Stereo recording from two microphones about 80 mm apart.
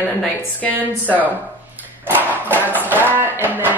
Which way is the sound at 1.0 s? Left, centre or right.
Left.